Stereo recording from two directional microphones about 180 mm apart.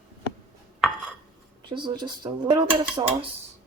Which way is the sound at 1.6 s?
25° right (ahead or behind).